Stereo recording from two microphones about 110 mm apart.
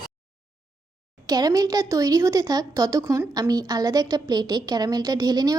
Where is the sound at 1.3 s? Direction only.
35° right (ahead or behind).